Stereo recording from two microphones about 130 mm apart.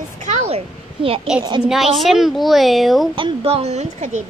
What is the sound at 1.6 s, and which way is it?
A child's voice, centre (ahead or behind).